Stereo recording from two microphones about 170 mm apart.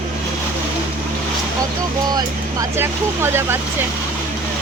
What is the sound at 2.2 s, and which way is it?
Speech, 15° right (ahead or behind).